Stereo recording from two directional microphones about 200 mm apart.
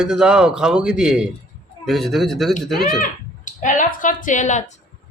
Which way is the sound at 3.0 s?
40° left (ahead or behind).